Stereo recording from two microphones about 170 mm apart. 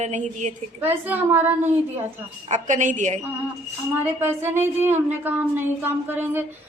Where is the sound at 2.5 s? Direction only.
45° right (ahead or behind).